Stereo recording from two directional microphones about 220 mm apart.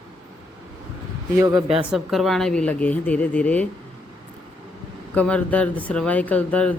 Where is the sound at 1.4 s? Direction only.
10° right (ahead or behind).